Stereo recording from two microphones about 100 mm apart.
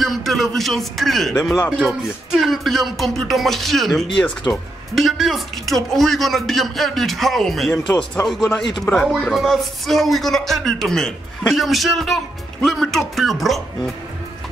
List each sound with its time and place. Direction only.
0.0 s speech: centre (ahead or behind)
8.2 s a man's voice: 25° left (ahead or behind)
9.2 s speech: centre (ahead or behind)